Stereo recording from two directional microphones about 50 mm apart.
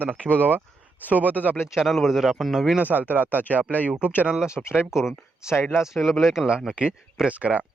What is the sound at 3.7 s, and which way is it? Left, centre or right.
Speech, left.